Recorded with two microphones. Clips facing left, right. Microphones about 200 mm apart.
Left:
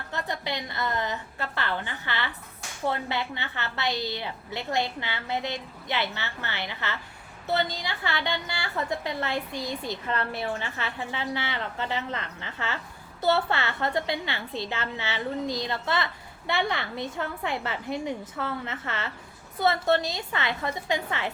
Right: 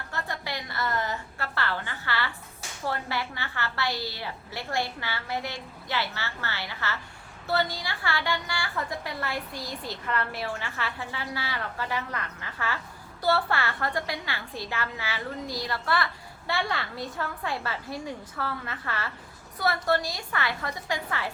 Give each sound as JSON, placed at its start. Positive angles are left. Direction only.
{"t": 0.1, "sound": "a woman's voice", "side_deg": 20}